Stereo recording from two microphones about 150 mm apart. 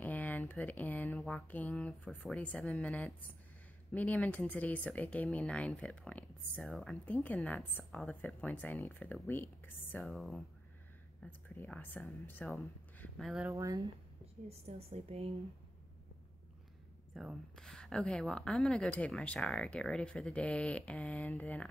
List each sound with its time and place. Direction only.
0.0 s a sound: 10° left (ahead or behind)
1.1 s mantra: centre (ahead or behind)
1.5 s speech: 5° left (ahead or behind)
10.1 s speech: centre (ahead or behind)
11.2 s speech: 10° left (ahead or behind)
13.2 s speech: centre (ahead or behind)
13.5 s speech: 20° right (ahead or behind)
14.5 s a woman's voice: 45° right (ahead or behind)
17.1 s speech: centre (ahead or behind)